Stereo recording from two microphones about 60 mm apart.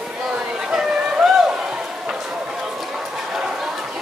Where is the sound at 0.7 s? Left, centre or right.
Centre.